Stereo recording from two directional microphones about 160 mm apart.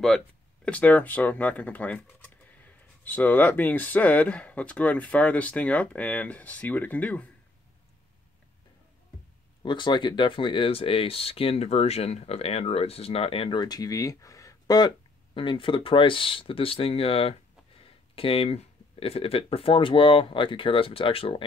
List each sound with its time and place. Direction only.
0.7 s speech: 10° left (ahead or behind)
9.6 s speech: 30° left (ahead or behind)